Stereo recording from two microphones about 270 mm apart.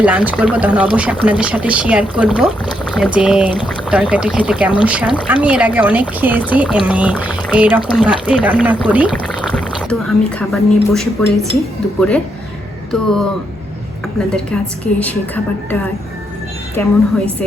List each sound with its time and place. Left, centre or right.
0.0 s speech: centre
14.3 s speech: centre
16.8 s a woman's voice: centre